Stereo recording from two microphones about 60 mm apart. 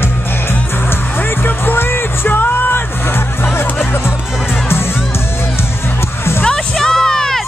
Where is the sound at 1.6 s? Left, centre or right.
Left.